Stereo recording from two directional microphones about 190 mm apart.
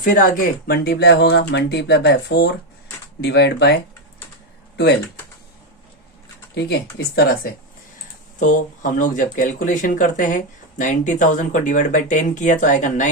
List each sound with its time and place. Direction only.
0.0 s speech: 45° left (ahead or behind)
6.5 s speech: 60° left (ahead or behind)
8.4 s speech: 40° left (ahead or behind)